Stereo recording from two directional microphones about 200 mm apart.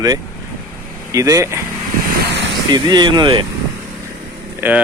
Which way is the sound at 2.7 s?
20° right (ahead or behind).